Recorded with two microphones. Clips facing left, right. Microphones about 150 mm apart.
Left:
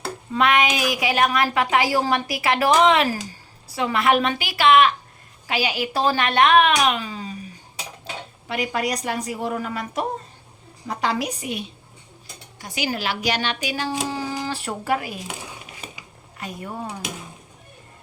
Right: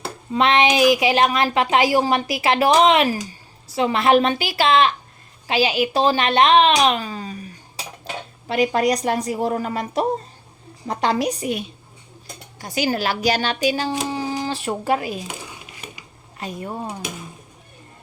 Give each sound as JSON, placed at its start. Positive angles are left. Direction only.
{"t": 0.3, "sound": "a woman's voice", "side_deg": -25}
{"t": 8.4, "sound": "a woman's voice", "side_deg": -30}
{"t": 14.1, "sound": "speech", "side_deg": -20}
{"t": 16.4, "sound": "a woman's voice", "side_deg": -25}